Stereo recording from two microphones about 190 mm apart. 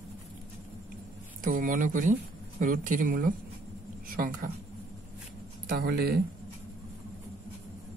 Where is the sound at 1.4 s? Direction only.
45° right (ahead or behind).